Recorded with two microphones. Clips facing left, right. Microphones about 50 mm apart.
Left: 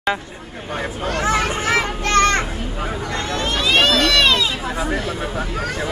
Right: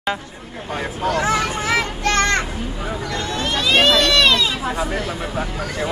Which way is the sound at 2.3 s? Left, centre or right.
Left.